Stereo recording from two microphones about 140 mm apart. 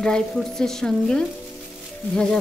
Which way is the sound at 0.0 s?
5° left (ahead or behind).